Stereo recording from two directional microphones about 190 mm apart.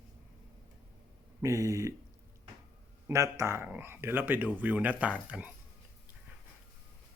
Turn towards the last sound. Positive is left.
turn(degrees=-5)  # may be behind; listen again after turning